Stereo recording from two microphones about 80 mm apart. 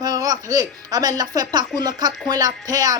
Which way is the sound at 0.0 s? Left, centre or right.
Right.